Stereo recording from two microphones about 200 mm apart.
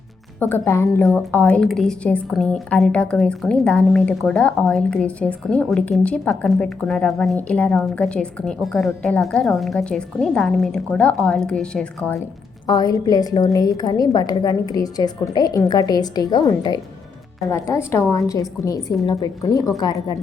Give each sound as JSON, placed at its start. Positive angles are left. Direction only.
{"t": 0.3, "sound": "a woman's voice", "side_deg": 10}
{"t": 12.6, "sound": "a woman's voice", "side_deg": 20}